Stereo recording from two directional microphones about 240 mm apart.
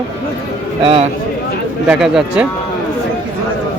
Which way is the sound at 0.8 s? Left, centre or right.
Right.